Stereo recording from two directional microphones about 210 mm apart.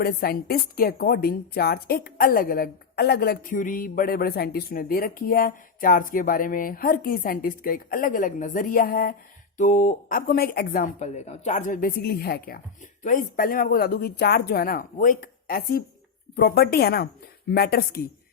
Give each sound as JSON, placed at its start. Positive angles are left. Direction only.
{"t": 0.0, "sound": "a woman's voice", "side_deg": 45}